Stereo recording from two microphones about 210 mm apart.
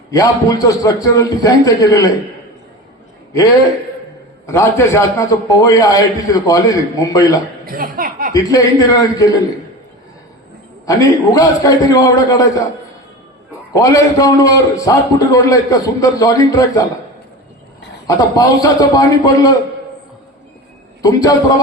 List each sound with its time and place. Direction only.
0.1 s a man's voice: 15° left (ahead or behind)
4.4 s a man's voice: 15° left (ahead or behind)
7.6 s speech: 45° right (ahead or behind)
8.3 s a man's voice: 15° left (ahead or behind)
10.8 s a man's voice: 15° left (ahead or behind)
13.7 s a man's voice: 15° left (ahead or behind)
18.3 s a man's voice: 15° left (ahead or behind)
21.0 s a man's voice: 15° left (ahead or behind)